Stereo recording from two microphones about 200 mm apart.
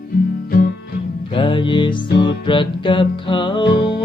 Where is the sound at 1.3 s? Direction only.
25° left (ahead or behind).